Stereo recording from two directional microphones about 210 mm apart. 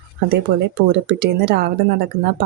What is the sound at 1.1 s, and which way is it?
Speech, 50° right (ahead or behind).